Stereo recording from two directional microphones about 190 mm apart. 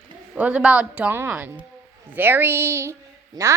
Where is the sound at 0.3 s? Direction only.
5° right (ahead or behind).